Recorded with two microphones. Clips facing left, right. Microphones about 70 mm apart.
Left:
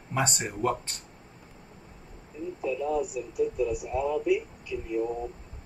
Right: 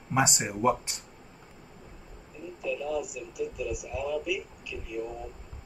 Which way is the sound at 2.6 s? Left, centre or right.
Left.